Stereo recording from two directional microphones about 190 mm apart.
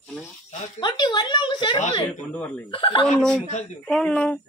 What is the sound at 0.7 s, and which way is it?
Speech, 25° left (ahead or behind).